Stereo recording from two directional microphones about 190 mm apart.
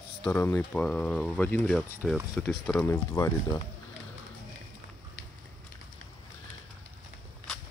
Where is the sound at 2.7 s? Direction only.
15° left (ahead or behind).